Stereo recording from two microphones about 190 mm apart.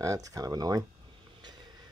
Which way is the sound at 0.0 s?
15° right (ahead or behind).